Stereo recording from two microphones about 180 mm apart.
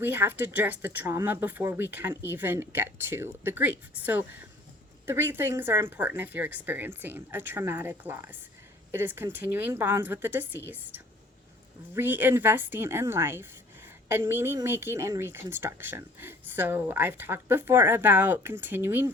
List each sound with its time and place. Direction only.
0.0 s speech: 10° right (ahead or behind)